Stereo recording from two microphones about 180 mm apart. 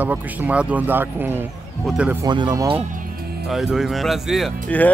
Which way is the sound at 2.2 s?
25° right (ahead or behind).